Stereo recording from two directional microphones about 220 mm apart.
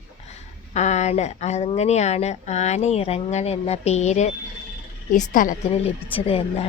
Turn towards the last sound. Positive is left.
turn(degrees=25)  # may be behind; listen again after turning